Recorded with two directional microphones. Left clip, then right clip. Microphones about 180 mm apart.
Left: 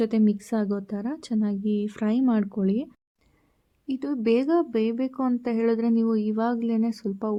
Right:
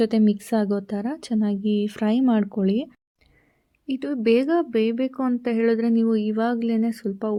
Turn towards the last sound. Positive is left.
turn(degrees=-20)  # may be behind; listen again after turning